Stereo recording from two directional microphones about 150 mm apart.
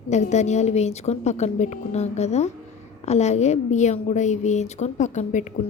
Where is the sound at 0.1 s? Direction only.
50° left (ahead or behind).